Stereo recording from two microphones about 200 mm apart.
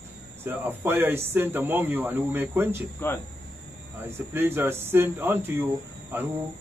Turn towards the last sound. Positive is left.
turn(degrees=-10)  # may be behind; listen again after turning